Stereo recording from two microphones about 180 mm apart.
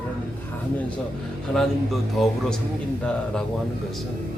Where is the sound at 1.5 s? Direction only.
Centre (ahead or behind).